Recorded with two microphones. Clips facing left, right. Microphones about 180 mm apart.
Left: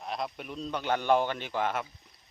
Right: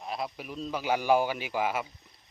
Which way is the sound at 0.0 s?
Centre (ahead or behind).